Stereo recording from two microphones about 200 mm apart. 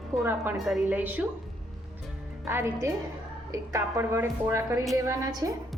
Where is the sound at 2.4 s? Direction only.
15° right (ahead or behind).